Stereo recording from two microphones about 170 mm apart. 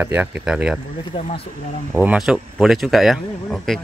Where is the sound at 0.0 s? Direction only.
10° right (ahead or behind).